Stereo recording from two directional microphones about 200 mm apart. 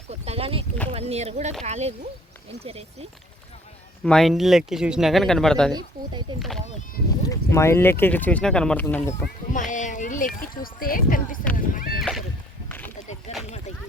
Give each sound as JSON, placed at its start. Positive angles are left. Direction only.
{"t": 0.1, "sound": "speech", "side_deg": -30}
{"t": 4.0, "sound": "speech", "side_deg": 0}
{"t": 6.3, "sound": "speech", "side_deg": -25}
{"t": 7.2, "sound": "speech", "side_deg": 15}
{"t": 9.5, "sound": "speech", "side_deg": 40}
{"t": 11.9, "sound": "rowboat", "side_deg": 0}
{"t": 13.3, "sound": "a sound", "side_deg": 30}